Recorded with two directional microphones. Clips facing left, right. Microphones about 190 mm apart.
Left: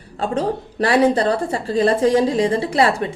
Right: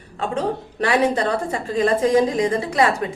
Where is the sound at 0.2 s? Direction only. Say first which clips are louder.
Left 2 dB; 35° left (ahead or behind).